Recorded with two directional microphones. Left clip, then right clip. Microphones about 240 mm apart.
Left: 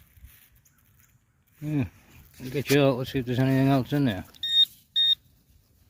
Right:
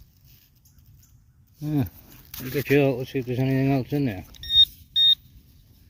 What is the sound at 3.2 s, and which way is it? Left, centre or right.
Speech, left.